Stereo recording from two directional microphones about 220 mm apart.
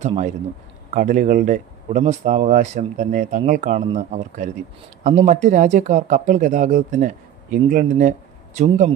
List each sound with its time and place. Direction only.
0.0 s speech: 30° right (ahead or behind)